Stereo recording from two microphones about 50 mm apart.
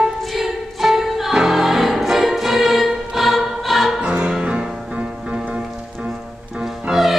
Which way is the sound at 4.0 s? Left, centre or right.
Centre.